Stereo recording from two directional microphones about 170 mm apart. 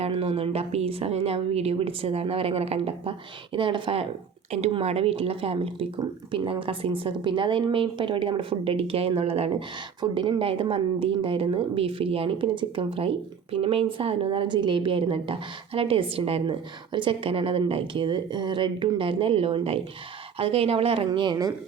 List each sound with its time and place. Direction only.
0.0 s a woman's voice: 35° right (ahead or behind)